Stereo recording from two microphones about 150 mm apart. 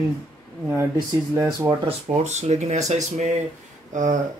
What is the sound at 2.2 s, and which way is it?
Speech, 50° right (ahead or behind).